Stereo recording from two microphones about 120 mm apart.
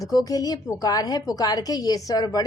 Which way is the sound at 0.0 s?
30° left (ahead or behind).